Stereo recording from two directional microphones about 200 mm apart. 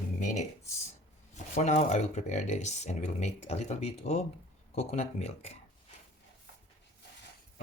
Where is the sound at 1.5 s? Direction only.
35° left (ahead or behind).